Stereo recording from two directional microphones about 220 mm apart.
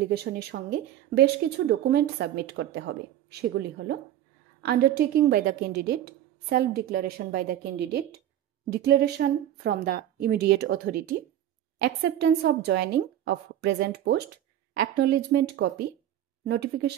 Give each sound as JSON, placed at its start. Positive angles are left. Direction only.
{"t": 0.0, "sound": "speech", "side_deg": -45}